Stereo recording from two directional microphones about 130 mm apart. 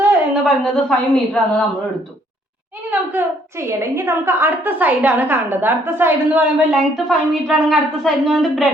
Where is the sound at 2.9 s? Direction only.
15° right (ahead or behind).